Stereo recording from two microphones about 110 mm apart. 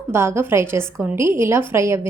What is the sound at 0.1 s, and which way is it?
A woman's voice, 20° right (ahead or behind).